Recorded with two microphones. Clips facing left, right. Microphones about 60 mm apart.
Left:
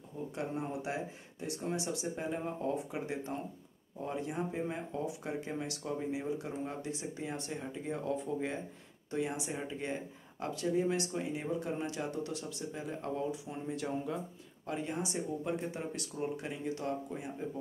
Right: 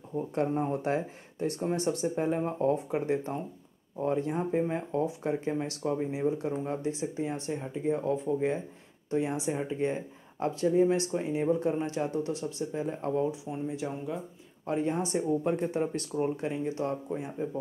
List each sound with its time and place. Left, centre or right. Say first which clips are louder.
0.3 s speech: right 9 dB; right
13.5 s speech: right 4 dB; centre
14.7 s speech: right 8 dB; right